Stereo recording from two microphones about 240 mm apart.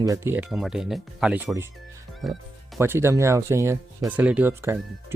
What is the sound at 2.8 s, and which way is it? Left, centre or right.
Speech, centre.